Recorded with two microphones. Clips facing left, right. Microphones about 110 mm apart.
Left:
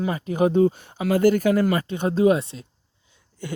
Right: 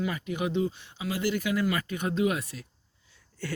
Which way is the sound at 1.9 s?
30° left (ahead or behind).